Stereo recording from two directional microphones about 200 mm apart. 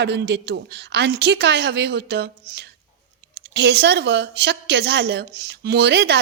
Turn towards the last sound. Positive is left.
turn(degrees=-55)  # may be behind; listen again after turning